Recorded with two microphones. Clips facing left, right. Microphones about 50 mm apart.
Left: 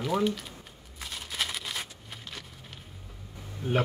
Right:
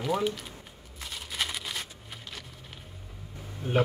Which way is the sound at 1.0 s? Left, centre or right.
Centre.